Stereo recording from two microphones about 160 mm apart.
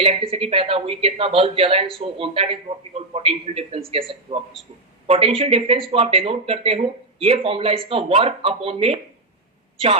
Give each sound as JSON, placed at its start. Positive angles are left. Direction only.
{"t": 0.0, "sound": "speech", "side_deg": -35}